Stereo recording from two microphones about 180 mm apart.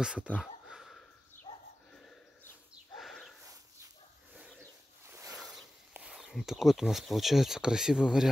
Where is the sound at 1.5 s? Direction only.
30° left (ahead or behind).